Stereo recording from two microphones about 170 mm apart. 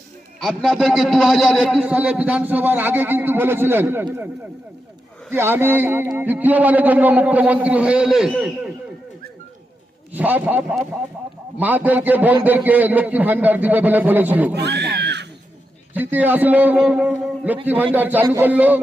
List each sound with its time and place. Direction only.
0.3 s a man's voice: centre (ahead or behind)
5.3 s a man's voice: 15° right (ahead or behind)
10.1 s a man's voice: 10° right (ahead or behind)
14.5 s speech: 80° right
16.0 s a man's voice: 10° right (ahead or behind)